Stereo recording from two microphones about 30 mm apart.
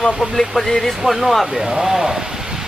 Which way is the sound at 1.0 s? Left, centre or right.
Centre.